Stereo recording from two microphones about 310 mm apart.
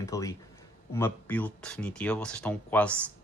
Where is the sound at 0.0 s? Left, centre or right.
Centre.